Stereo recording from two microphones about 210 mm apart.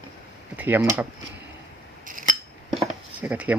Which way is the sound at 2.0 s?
40° right (ahead or behind).